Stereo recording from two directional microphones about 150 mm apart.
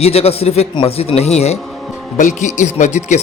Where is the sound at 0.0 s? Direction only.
45° left (ahead or behind).